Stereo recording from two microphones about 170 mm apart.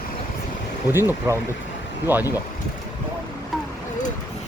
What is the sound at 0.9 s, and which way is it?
Speech, 15° right (ahead or behind).